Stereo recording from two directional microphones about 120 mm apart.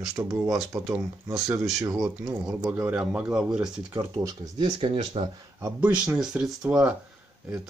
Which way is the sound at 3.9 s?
30° right (ahead or behind).